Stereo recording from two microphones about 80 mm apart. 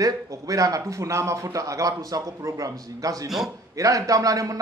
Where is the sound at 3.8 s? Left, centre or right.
Right.